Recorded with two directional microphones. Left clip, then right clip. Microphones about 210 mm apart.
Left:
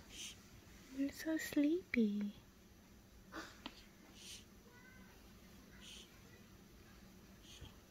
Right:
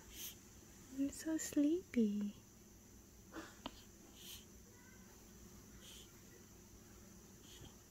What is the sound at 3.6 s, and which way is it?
Wheeze, 20° right (ahead or behind).